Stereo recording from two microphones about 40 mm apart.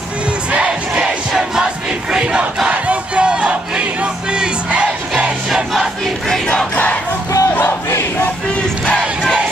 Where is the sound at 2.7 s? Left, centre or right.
Right.